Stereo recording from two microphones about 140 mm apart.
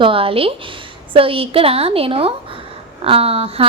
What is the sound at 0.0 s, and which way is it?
A woman's voice, 40° right (ahead or behind).